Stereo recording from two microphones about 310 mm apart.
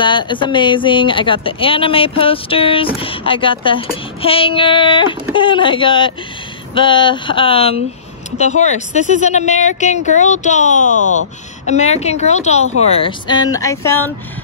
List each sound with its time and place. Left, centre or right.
0.0 s speech: centre